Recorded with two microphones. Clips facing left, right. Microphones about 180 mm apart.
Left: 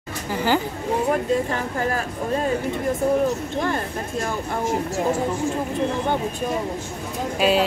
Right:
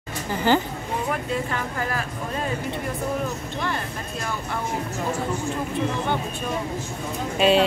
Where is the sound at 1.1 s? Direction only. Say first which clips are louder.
Left 5 dB; 35° left (ahead or behind).